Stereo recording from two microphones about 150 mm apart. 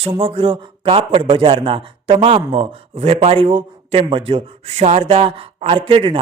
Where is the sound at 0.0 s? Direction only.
40° right (ahead or behind).